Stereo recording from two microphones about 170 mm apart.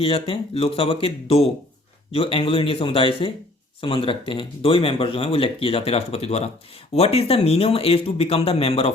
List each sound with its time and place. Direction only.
0.0 s speech: 35° left (ahead or behind)